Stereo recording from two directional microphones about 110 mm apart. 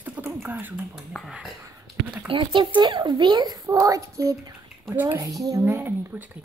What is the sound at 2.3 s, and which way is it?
Speech, 50° right (ahead or behind).